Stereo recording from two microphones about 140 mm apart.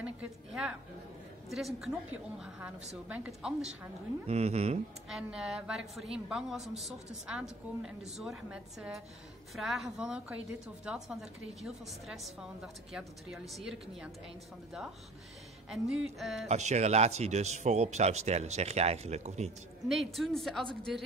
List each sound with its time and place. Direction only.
0.0 s a woman's voice: 5° right (ahead or behind)
1.8 s a woman's voice: 5° right (ahead or behind)
4.3 s speech: 50° right (ahead or behind)
5.1 s a woman's voice: 5° right (ahead or behind)
15.7 s a woman's voice: centre (ahead or behind)
16.4 s speech: 55° right (ahead or behind)
19.9 s a woman's voice: centre (ahead or behind)